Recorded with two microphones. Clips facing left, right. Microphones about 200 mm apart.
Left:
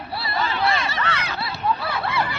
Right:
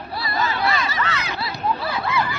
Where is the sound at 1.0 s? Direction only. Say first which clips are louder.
Even; 60° left (ahead or behind).